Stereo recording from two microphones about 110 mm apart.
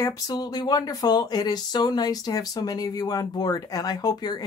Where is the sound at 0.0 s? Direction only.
35° left (ahead or behind).